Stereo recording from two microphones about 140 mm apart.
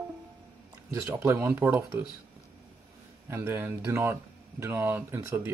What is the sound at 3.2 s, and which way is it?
Speech, 15° right (ahead or behind).